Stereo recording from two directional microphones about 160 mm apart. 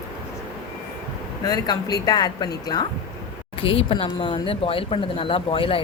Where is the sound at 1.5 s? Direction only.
25° left (ahead or behind).